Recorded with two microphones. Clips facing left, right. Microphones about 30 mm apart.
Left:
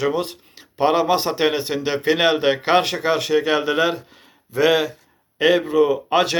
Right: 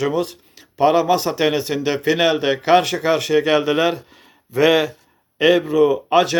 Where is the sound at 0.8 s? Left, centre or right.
Left.